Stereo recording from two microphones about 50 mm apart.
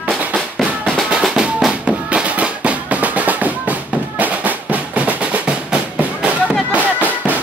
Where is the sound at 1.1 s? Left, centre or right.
Centre.